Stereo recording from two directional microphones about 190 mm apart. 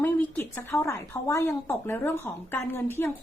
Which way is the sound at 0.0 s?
10° left (ahead or behind).